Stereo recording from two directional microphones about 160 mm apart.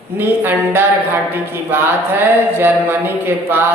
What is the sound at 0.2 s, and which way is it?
Speech, 15° right (ahead or behind).